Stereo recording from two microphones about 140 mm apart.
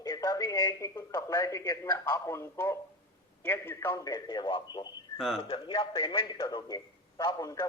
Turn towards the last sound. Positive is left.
turn(degrees=25)  # may be behind; listen again after turning